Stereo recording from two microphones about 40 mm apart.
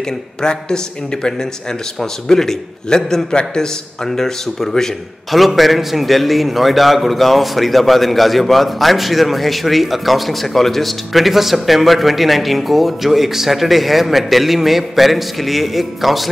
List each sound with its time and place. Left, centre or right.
0.0 s speech: centre
5.3 s a man's voice: centre